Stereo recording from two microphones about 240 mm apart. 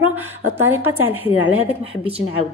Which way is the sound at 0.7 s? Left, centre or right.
Centre.